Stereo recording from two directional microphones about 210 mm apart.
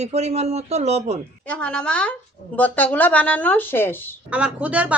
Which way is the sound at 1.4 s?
5° left (ahead or behind).